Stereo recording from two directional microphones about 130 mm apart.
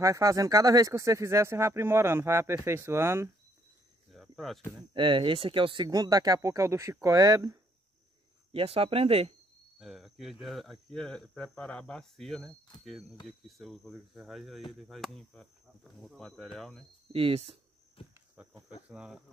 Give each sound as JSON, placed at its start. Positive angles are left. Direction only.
{"t": 0.0, "sound": "speech", "side_deg": -25}
{"t": 4.1, "sound": "cricket", "side_deg": 0}
{"t": 4.9, "sound": "speech", "side_deg": -40}
{"t": 8.5, "sound": "speech", "side_deg": -45}
{"t": 9.8, "sound": "cricket", "side_deg": 0}
{"t": 10.4, "sound": "speech", "side_deg": 0}
{"t": 13.5, "sound": "speech", "side_deg": 0}
{"t": 17.1, "sound": "speech", "side_deg": -50}
{"t": 18.0, "sound": "speech", "side_deg": 45}
{"t": 18.9, "sound": "cricket", "side_deg": -10}